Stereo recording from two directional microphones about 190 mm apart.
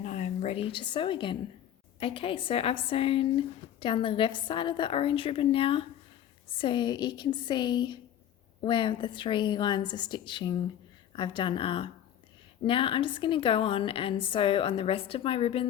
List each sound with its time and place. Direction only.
0.0 s a woman's voice: 35° left (ahead or behind)